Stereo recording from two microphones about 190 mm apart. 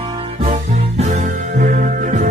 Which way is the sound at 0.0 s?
30° right (ahead or behind).